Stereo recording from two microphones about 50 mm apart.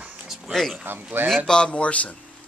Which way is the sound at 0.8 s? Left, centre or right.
Right.